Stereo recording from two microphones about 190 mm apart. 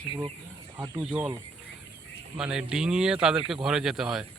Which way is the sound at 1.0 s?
5° right (ahead or behind).